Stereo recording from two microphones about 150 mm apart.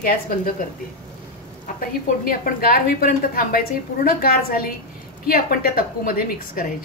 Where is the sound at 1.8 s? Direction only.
75° left (ahead or behind).